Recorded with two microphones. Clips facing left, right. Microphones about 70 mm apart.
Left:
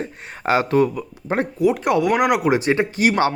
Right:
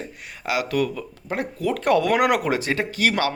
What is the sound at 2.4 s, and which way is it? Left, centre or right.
Speech, left.